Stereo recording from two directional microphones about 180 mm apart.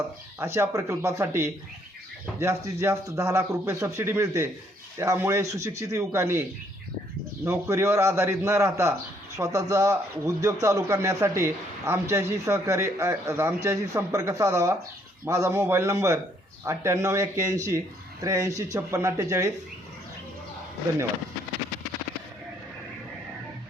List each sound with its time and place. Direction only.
0.3 s a man's voice: 15° right (ahead or behind)
7.4 s a man's voice: 15° right (ahead or behind)